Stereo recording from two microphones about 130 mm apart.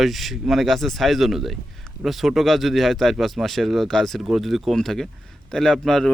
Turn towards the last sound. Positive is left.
turn(degrees=0)  # may be behind; listen again after turning